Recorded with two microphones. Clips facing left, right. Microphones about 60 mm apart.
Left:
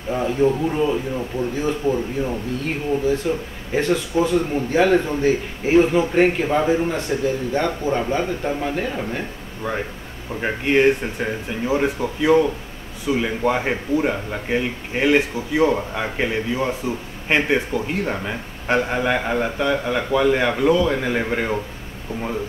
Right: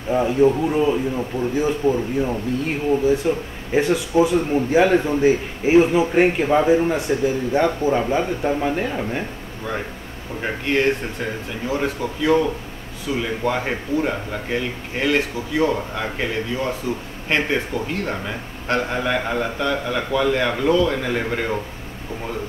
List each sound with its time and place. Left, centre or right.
0.1 s a man's voice: centre
10.4 s speech: centre